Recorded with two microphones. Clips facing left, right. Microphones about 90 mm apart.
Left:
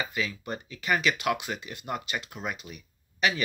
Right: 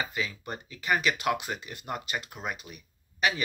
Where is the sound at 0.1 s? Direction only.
35° right (ahead or behind).